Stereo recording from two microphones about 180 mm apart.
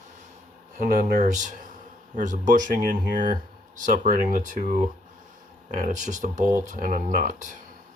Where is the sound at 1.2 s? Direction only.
45° right (ahead or behind).